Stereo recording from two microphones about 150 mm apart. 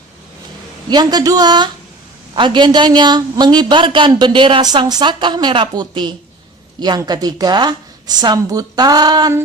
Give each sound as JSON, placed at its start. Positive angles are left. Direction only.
{"t": 0.9, "sound": "a man's voice", "side_deg": -30}